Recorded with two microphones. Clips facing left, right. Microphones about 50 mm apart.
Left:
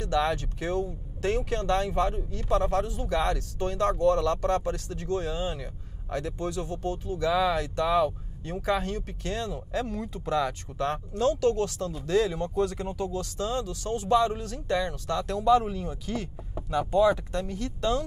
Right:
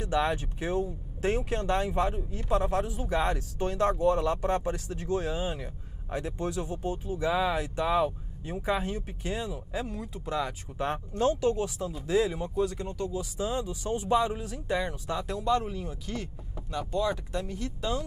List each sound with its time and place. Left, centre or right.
0.0 s speech: centre
10.8 s speech: right
11.5 s speech: centre
12.5 s speech: centre
13.2 s speech: centre
16.5 s speech: centre
17.1 s speech: centre